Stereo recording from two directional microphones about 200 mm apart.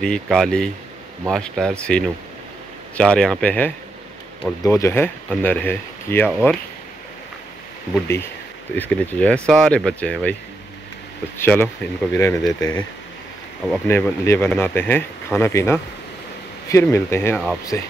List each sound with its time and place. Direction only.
0.0 s speech: 5° left (ahead or behind)
8.7 s speech: 10° left (ahead or behind)
11.3 s speech: 10° left (ahead or behind)